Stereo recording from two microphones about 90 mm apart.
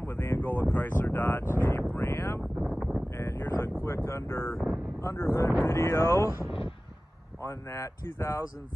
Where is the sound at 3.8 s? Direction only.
30° left (ahead or behind).